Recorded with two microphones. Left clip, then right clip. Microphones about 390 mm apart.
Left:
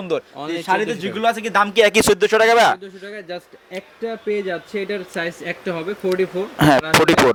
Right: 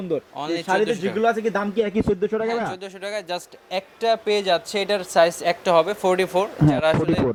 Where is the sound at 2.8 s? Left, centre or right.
Right.